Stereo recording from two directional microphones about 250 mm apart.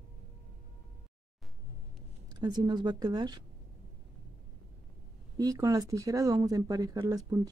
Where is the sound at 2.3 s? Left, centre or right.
Centre.